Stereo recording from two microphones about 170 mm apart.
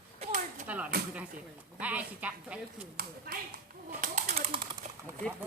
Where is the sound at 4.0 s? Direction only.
45° right (ahead or behind).